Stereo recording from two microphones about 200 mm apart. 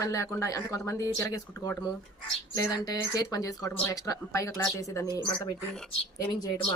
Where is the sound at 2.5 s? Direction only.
20° left (ahead or behind).